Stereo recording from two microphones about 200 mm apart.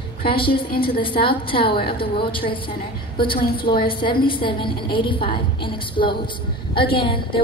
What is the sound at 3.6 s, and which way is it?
A woman's voice, 25° left (ahead or behind).